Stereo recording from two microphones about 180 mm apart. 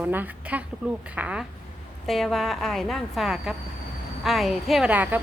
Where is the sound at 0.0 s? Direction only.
10° right (ahead or behind).